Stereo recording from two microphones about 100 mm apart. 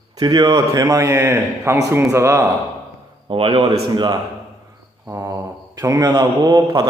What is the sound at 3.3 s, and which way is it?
Speech, 65° right (ahead or behind).